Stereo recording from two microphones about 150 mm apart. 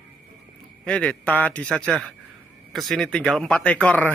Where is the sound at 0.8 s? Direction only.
10° left (ahead or behind).